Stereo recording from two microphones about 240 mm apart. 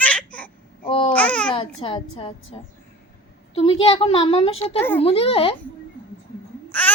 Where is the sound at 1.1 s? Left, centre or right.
Centre.